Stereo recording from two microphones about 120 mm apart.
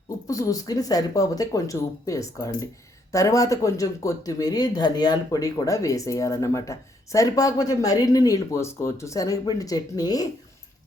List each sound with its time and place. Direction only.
0.3 s speech: 30° left (ahead or behind)